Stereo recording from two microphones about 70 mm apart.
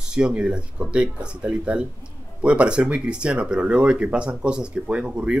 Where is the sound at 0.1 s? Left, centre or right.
Centre.